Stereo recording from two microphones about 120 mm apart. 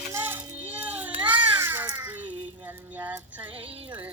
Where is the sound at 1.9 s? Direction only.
15° right (ahead or behind).